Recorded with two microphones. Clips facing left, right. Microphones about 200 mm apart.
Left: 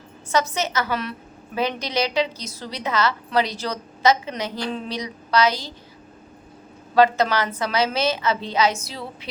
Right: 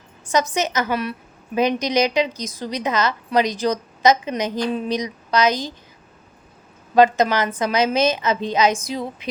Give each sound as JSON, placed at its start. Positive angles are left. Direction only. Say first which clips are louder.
{"t": 0.3, "sound": "a woman's voice", "louder": "right 2 dB", "side_deg": -15}
{"t": 6.9, "sound": "a woman's voice", "louder": "right 2 dB", "side_deg": -20}